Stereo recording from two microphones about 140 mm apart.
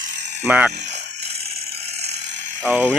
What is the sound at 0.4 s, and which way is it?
Speech, 10° right (ahead or behind).